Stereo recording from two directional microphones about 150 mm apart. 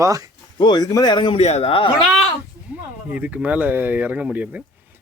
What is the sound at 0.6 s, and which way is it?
Speech, 30° left (ahead or behind).